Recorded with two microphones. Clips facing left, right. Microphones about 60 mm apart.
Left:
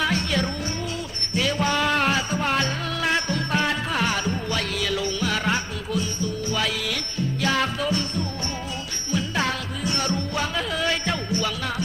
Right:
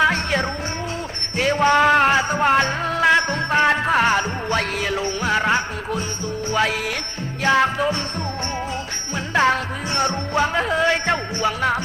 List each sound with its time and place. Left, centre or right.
0.0 s music: right
9.1 s music: right